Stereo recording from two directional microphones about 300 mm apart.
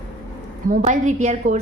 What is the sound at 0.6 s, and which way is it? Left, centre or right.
Speech, right.